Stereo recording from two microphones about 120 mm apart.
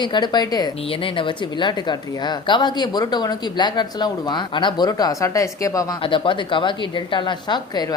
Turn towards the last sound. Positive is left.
turn(degrees=35)  # may be behind; listen again after turning